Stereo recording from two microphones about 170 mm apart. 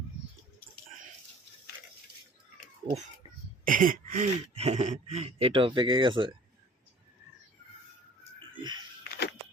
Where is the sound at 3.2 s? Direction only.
35° left (ahead or behind).